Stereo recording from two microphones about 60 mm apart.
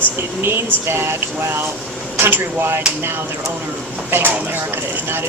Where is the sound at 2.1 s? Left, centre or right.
Right.